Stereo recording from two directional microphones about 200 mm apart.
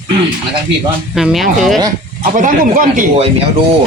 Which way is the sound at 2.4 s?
40° right (ahead or behind).